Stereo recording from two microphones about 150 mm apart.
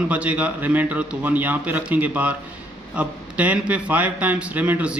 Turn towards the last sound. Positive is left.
turn(degrees=-10)  # may be behind; listen again after turning